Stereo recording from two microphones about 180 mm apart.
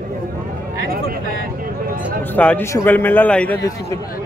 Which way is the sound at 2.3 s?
10° left (ahead or behind).